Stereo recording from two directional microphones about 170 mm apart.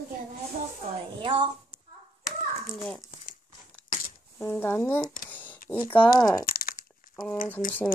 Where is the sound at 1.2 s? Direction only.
30° right (ahead or behind).